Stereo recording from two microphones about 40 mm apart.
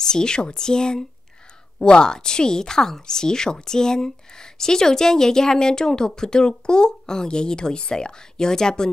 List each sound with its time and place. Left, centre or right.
0.0 s a woman's voice: centre